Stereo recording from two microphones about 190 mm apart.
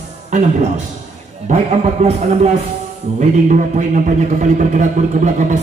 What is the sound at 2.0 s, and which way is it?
A man's voice, 35° right (ahead or behind).